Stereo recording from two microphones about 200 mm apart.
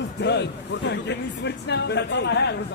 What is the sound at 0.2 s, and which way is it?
Speech, 60° left (ahead or behind).